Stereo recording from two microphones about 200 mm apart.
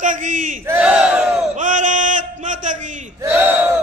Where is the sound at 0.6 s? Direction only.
10° right (ahead or behind).